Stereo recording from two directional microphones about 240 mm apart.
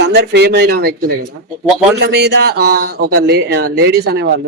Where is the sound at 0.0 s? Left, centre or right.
Right.